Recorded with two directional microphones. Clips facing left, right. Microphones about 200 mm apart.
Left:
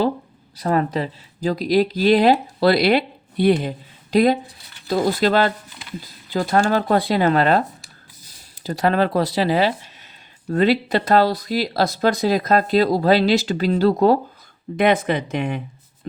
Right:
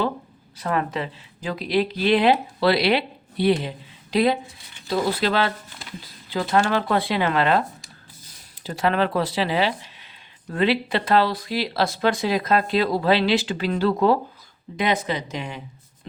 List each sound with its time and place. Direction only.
0.5 s speech: 35° left (ahead or behind)
8.6 s speech: 40° left (ahead or behind)
14.8 s speech: 55° left (ahead or behind)